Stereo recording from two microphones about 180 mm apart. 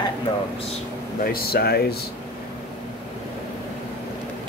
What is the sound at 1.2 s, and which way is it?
Speech, 55° left (ahead or behind).